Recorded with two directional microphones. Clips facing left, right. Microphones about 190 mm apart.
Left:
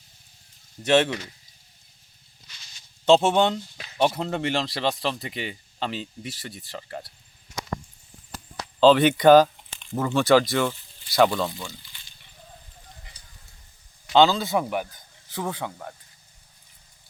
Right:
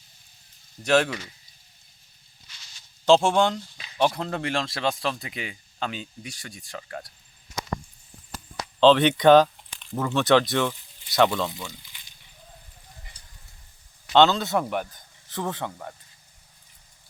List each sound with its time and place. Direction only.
0.8 s speech: 5° left (ahead or behind)
3.2 s speech: 5° left (ahead or behind)
8.8 s speech: 5° left (ahead or behind)
11.5 s frying: 15° right (ahead or behind)
14.1 s speech: centre (ahead or behind)